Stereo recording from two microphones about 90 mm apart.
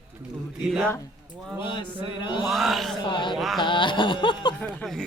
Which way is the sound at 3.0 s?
60° left (ahead or behind).